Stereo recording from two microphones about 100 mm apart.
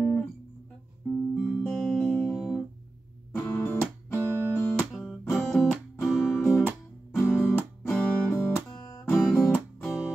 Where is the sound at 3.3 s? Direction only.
15° left (ahead or behind).